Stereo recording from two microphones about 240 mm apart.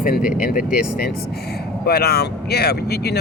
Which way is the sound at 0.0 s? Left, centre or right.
Left.